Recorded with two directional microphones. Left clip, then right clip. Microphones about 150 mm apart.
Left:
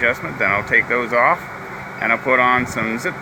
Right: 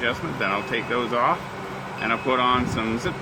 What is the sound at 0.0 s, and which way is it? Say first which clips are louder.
Speech: left 7 dB; 30° left (ahead or behind).